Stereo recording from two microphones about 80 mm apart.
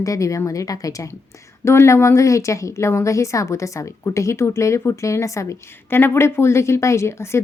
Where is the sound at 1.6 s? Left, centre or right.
Left.